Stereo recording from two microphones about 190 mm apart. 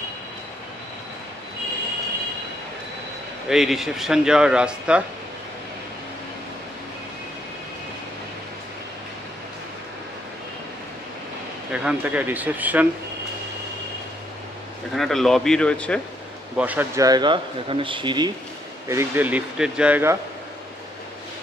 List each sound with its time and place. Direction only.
3.4 s speech: centre (ahead or behind)
11.7 s speech: 5° right (ahead or behind)
15.0 s speech: centre (ahead or behind)
16.5 s speech: 10° right (ahead or behind); by 18.3 s 25° right (ahead or behind)
18.9 s speech: 10° right (ahead or behind)